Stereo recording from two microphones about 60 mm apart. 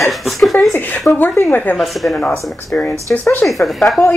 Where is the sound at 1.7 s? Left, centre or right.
Centre.